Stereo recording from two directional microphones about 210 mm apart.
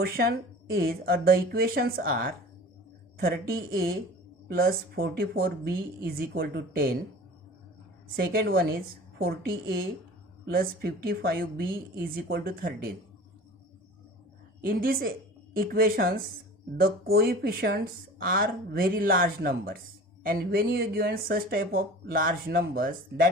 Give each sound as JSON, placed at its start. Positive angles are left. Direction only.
{"t": 0.0, "sound": "speech", "side_deg": -45}
{"t": 8.1, "sound": "speech", "side_deg": -45}
{"t": 14.6, "sound": "speech", "side_deg": -45}